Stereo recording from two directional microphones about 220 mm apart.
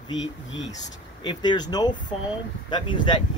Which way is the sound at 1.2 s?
20° left (ahead or behind).